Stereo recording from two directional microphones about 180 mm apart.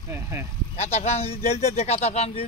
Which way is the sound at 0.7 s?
35° left (ahead or behind).